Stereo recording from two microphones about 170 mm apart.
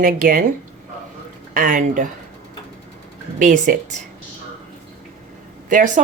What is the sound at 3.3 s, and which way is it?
Speech, 50° right (ahead or behind).